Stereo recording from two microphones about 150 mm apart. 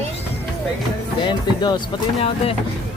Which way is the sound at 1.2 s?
30° left (ahead or behind).